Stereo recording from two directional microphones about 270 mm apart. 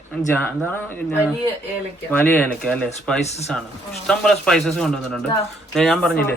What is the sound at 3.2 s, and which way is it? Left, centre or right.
Speech, left.